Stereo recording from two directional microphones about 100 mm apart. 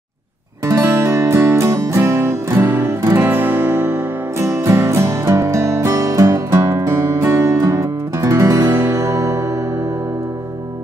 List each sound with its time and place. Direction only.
0.7 s music: 25° right (ahead or behind)